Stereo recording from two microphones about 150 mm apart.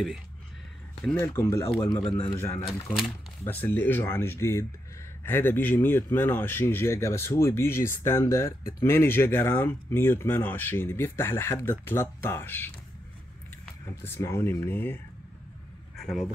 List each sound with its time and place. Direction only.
1.1 s speech: 15° left (ahead or behind)
1.9 s speech: 35° left (ahead or behind)
2.3 s speech: 15° left (ahead or behind)
14.0 s speech: 15° left (ahead or behind)